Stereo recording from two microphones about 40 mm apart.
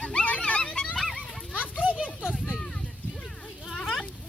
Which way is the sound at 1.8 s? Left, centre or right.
Right.